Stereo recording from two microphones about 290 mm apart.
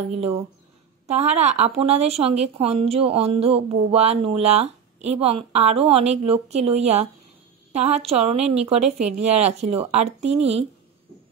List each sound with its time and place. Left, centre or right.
0.1 s a woman's voice: right